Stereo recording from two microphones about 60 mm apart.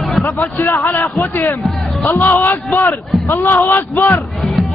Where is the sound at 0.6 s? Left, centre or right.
Left.